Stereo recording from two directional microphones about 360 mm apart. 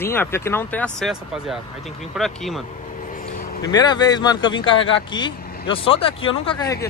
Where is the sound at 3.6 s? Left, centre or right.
Centre.